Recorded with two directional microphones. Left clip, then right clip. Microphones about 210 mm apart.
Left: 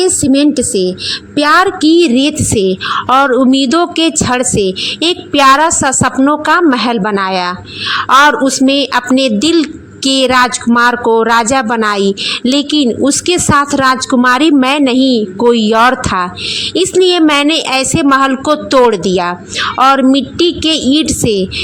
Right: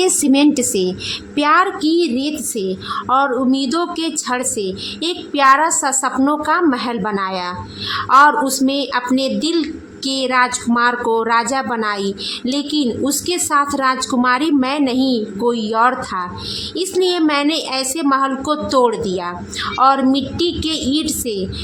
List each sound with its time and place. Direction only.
0.0 s a woman's voice: 15° left (ahead or behind)